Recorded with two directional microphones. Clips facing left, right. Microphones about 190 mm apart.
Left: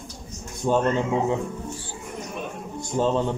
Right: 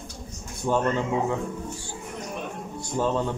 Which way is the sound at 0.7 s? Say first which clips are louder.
Left 3 dB; 20° left (ahead or behind).